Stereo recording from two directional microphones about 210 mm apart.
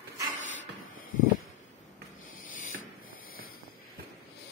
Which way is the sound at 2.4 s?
40° left (ahead or behind).